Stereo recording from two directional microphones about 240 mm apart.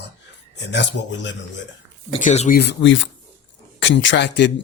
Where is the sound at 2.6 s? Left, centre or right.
Left.